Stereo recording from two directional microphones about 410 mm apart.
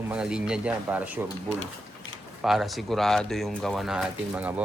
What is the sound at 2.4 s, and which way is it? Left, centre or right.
Speech, centre.